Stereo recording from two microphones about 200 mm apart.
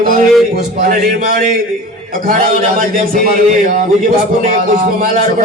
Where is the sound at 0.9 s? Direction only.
45° right (ahead or behind).